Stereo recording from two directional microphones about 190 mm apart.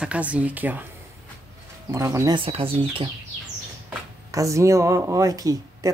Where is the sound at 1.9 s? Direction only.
15° right (ahead or behind).